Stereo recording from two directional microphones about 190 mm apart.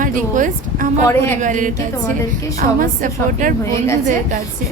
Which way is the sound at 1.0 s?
15° left (ahead or behind).